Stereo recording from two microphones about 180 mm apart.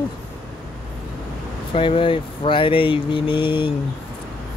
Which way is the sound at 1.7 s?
30° left (ahead or behind).